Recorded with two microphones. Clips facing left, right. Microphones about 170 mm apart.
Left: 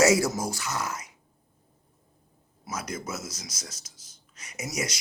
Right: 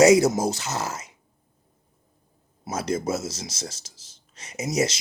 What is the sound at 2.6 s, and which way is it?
Speech, 30° right (ahead or behind).